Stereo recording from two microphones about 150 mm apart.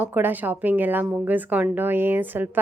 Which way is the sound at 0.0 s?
15° right (ahead or behind).